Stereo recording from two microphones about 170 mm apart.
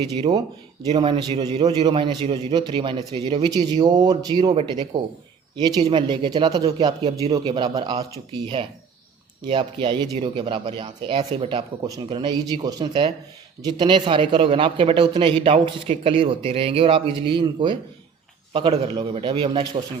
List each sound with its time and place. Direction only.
0.0 s a man's voice: 25° right (ahead or behind)
6.7 s a man's voice: 35° right (ahead or behind)
9.5 s a man's voice: 30° right (ahead or behind)